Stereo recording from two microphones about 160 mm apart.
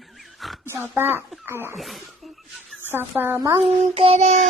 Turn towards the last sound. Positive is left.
turn(degrees=-40)  # may be behind; listen again after turning